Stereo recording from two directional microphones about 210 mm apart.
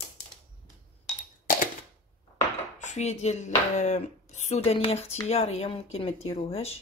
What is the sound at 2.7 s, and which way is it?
Speech, 35° left (ahead or behind).